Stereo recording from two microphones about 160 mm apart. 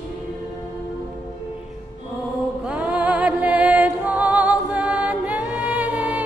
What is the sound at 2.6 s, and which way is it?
Music, 10° right (ahead or behind).